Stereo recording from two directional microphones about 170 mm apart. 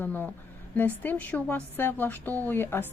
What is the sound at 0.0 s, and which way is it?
Speech, 10° left (ahead or behind).